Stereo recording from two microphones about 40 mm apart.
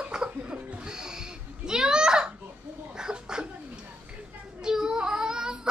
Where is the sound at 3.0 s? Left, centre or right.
Centre.